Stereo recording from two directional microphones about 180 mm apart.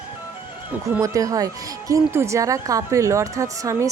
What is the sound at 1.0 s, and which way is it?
Speech, 20° right (ahead or behind).